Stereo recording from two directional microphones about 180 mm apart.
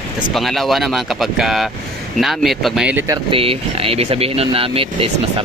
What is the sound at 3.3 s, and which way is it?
Speech, 30° right (ahead or behind).